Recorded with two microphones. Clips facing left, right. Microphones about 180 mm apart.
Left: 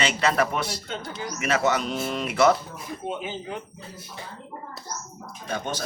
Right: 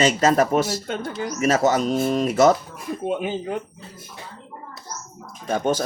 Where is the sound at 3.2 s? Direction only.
50° right (ahead or behind).